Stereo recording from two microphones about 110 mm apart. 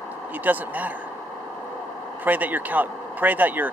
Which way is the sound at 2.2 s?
15° right (ahead or behind).